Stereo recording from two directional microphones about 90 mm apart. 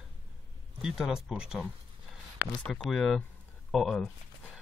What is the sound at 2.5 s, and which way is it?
Speech, 10° left (ahead or behind).